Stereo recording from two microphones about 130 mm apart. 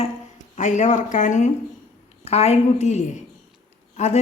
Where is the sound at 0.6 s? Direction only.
70° left (ahead or behind).